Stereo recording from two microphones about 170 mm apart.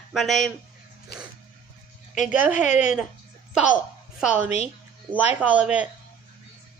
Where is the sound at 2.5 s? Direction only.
45° left (ahead or behind).